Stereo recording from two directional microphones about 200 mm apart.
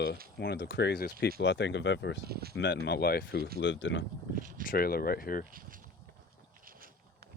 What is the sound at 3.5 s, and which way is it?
Speech, 65° left (ahead or behind).